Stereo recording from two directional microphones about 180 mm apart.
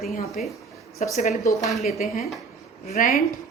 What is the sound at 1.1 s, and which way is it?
Speech, 40° left (ahead or behind).